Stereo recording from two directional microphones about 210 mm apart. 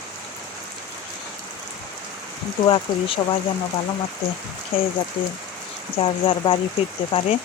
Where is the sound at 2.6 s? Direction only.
20° left (ahead or behind).